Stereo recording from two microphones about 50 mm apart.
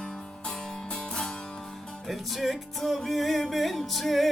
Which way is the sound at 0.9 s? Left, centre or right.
Centre.